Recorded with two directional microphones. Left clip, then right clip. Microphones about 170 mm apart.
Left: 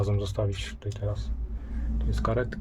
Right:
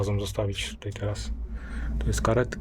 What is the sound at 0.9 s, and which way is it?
Speech, 20° right (ahead or behind).